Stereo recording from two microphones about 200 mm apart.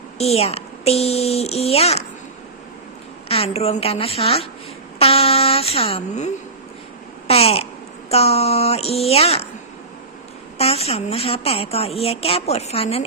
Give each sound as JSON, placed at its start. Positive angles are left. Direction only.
{"t": 0.2, "sound": "speech", "side_deg": 30}
{"t": 3.2, "sound": "a woman's voice", "side_deg": 30}
{"t": 7.3, "sound": "babbling", "side_deg": 30}
{"t": 8.1, "sound": "speech", "side_deg": 30}
{"t": 10.6, "sound": "speech", "side_deg": 30}